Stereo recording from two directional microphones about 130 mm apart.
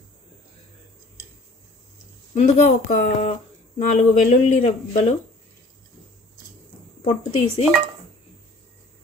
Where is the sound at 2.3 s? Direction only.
70° left (ahead or behind).